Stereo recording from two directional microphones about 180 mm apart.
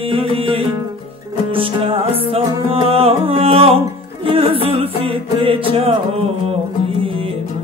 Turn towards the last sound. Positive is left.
turn(degrees=-30)  # may be behind; listen again after turning